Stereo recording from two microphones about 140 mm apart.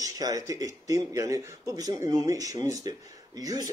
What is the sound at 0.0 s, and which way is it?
Speech, 25° right (ahead or behind).